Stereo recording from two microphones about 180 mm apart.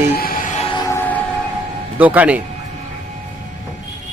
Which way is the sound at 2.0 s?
10° right (ahead or behind).